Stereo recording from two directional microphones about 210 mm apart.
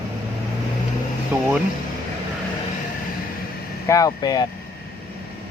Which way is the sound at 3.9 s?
15° left (ahead or behind).